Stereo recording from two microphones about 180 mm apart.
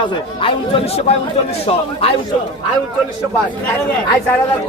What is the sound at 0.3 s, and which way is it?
A man's voice, 30° left (ahead or behind).